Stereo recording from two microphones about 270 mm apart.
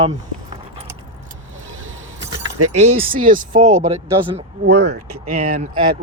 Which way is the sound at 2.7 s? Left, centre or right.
Right.